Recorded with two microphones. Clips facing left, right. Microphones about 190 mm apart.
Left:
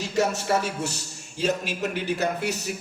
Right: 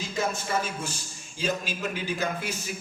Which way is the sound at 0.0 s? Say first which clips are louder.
Left 5 dB; 70° left (ahead or behind).